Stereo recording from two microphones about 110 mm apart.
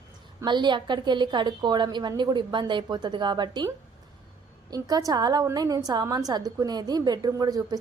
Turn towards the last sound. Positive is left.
turn(degrees=-35)  # may be behind; listen again after turning